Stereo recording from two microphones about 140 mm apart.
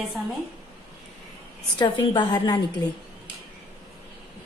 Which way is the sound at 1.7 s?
35° left (ahead or behind).